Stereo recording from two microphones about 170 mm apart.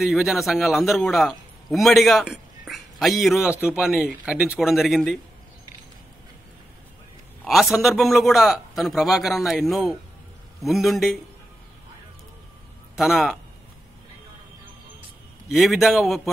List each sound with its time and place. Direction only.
0.0 s a man's voice: centre (ahead or behind)
7.4 s a man's voice: centre (ahead or behind)
12.9 s a man's voice: 5° right (ahead or behind)
15.5 s a man's voice: centre (ahead or behind)